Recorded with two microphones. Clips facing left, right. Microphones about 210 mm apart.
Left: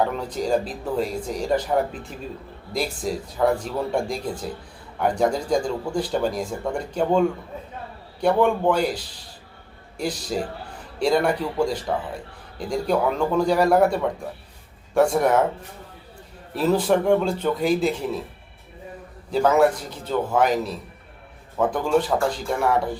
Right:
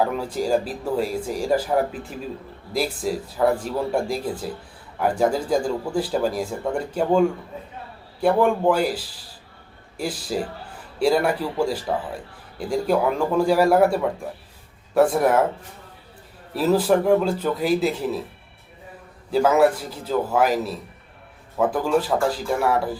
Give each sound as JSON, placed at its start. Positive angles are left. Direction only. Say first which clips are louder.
{"t": 0.0, "sound": "speech", "louder": "right 1 dB", "side_deg": -5}
{"t": 10.0, "sound": "speech", "louder": "even", "side_deg": -5}
{"t": 16.6, "sound": "speech", "louder": "right 1 dB", "side_deg": -5}
{"t": 19.3, "sound": "speech", "louder": "right 1 dB", "side_deg": -5}